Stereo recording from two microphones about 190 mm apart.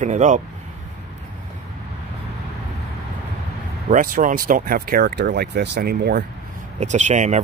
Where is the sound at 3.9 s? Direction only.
45° right (ahead or behind).